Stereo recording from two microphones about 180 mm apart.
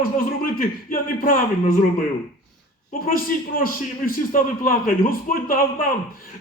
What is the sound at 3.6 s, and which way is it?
Speech, 50° left (ahead or behind).